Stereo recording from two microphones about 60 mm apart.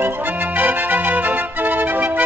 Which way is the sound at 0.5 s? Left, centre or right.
Right.